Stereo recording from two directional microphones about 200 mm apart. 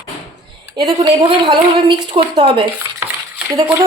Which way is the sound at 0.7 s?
20° right (ahead or behind).